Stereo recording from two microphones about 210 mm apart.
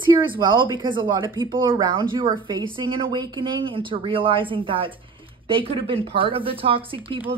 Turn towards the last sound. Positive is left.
turn(degrees=-25)  # may be behind; listen again after turning